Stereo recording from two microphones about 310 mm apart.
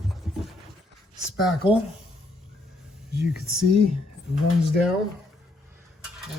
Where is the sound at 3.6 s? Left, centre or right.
Right.